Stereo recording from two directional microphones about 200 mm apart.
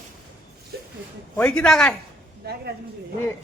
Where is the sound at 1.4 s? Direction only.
5° left (ahead or behind).